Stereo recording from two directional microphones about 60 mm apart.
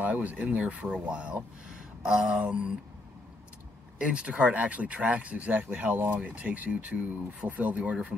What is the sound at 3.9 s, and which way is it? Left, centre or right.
Speech, centre.